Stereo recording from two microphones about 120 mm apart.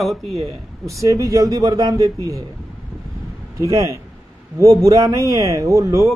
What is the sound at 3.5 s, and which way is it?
A man's voice, 25° right (ahead or behind).